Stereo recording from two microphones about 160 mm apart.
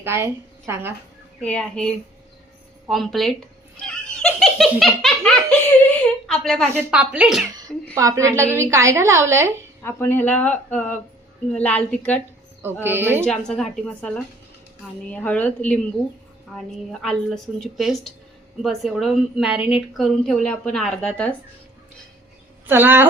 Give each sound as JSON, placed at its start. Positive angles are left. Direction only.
{"t": 0.0, "sound": "a woman's voice", "side_deg": -15}
{"t": 1.4, "sound": "a woman's voice", "side_deg": 5}
{"t": 3.8, "sound": "giggle", "side_deg": 5}
{"t": 6.7, "sound": "a woman's voice", "side_deg": -10}
{"t": 7.9, "sound": "a woman's voice", "side_deg": -20}
{"t": 9.8, "sound": "speech", "side_deg": 15}
{"t": 12.8, "sound": "a woman's voice", "side_deg": -15}
{"t": 13.2, "sound": "a woman's voice", "side_deg": 5}
{"t": 22.6, "sound": "speech", "side_deg": -10}